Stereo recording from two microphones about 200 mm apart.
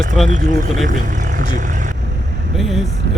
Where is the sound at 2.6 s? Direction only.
Centre (ahead or behind).